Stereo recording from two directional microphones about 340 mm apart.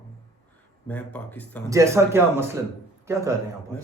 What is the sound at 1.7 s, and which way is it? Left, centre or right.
A man's voice, centre.